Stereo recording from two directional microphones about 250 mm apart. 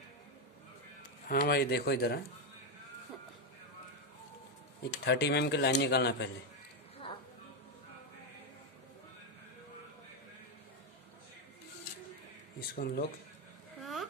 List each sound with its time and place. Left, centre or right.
1.3 s speech: left
5.0 s speech: left
12.5 s speech: left
13.7 s a sound: centre